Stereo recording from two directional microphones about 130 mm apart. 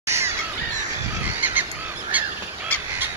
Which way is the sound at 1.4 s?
15° right (ahead or behind).